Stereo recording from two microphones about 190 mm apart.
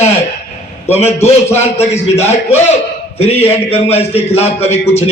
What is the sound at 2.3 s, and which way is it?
A man's voice, 35° left (ahead or behind).